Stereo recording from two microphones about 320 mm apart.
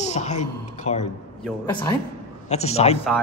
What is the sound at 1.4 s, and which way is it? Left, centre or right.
Speech, centre.